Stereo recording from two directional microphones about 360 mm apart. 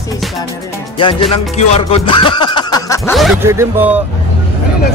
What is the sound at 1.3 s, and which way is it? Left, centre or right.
Music, centre.